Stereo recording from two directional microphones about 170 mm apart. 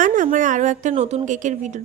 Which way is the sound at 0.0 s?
50° right (ahead or behind).